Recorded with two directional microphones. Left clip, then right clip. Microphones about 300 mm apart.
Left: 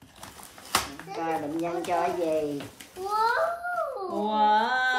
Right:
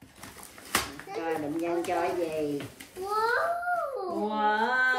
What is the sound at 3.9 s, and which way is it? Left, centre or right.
Music, centre.